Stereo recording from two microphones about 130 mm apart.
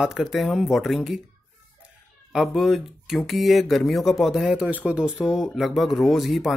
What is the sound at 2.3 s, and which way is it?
Speech, centre (ahead or behind).